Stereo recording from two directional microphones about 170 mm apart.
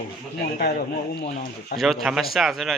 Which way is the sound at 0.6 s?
60° left (ahead or behind).